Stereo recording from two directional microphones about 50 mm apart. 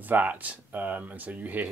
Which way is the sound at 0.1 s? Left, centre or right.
Right.